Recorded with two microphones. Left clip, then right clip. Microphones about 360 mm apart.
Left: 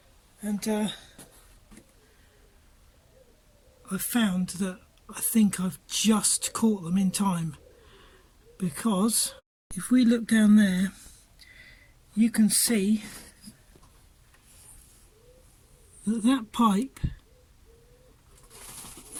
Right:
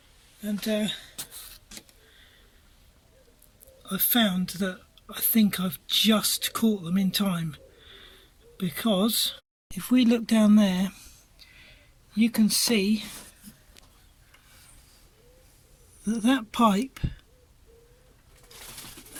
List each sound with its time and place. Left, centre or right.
0.7 s speech: centre
3.8 s speech: centre
8.5 s speech: centre
12.1 s speech: right
16.0 s speech: centre